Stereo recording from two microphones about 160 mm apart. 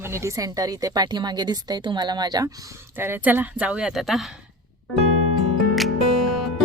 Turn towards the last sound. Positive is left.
turn(degrees=0)  # may be behind; listen again after turning